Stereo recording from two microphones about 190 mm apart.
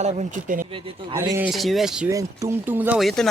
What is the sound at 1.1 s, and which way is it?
Speech, 15° right (ahead or behind).